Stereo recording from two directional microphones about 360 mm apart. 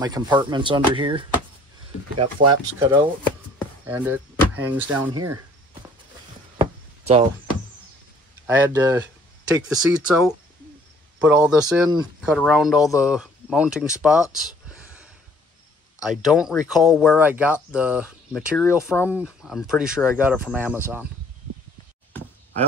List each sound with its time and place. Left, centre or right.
0.0 s speech: centre
6.6 s chop: centre
8.5 s speech: centre